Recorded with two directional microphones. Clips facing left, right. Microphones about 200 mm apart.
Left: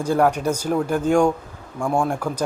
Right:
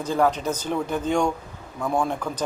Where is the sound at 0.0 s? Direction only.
10° left (ahead or behind).